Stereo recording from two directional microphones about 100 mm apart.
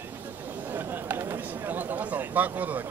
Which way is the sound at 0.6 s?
20° right (ahead or behind).